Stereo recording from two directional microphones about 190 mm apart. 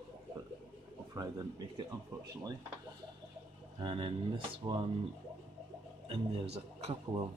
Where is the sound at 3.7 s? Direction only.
25° right (ahead or behind).